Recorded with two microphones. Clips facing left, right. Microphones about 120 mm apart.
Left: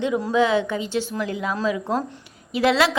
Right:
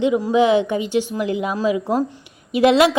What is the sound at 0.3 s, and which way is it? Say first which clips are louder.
A woman's voice: right 3 dB; 15° right (ahead or behind).